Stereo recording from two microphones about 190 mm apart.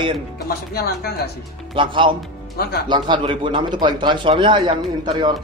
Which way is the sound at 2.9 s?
25° right (ahead or behind).